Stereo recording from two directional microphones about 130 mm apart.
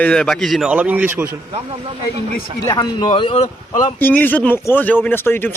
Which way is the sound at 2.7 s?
35° left (ahead or behind).